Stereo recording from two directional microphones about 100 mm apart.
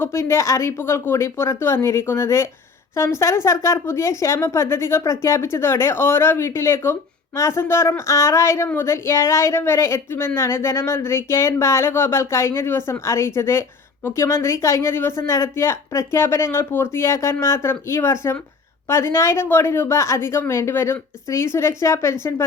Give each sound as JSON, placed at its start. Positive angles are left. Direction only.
{"t": 0.0, "sound": "speech", "side_deg": 25}